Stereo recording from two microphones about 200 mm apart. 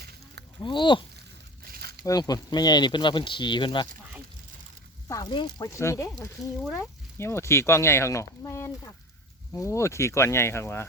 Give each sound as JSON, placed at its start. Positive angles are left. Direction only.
{"t": 0.6, "sound": "speech", "side_deg": 25}
{"t": 1.6, "sound": "a sound", "side_deg": -50}
{"t": 2.0, "sound": "speech", "side_deg": 20}
{"t": 5.0, "sound": "speech", "side_deg": 20}